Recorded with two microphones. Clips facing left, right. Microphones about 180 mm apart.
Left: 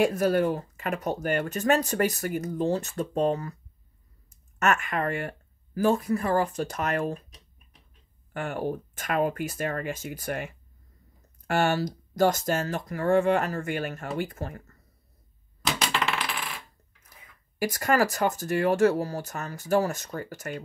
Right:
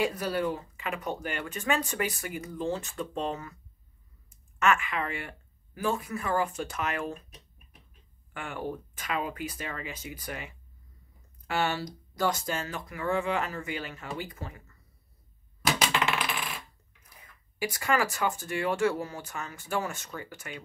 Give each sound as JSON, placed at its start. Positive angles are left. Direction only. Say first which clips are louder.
{"t": 0.0, "sound": "speech", "louder": "left 6 dB", "side_deg": 50}
{"t": 8.3, "sound": "speech", "louder": "left 6 dB", "side_deg": 40}
{"t": 15.6, "sound": "coin", "louder": "even", "side_deg": -5}
{"t": 17.6, "sound": "speech", "louder": "left 4 dB", "side_deg": 45}